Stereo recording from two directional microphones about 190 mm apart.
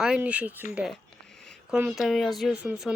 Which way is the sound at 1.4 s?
5° left (ahead or behind).